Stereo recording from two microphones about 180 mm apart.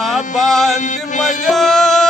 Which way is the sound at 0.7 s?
45° left (ahead or behind).